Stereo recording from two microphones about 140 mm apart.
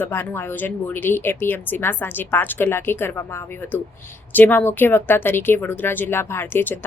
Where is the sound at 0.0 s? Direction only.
15° left (ahead or behind).